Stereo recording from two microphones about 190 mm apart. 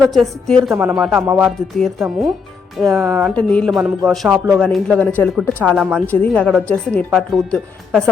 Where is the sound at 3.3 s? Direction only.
5° left (ahead or behind).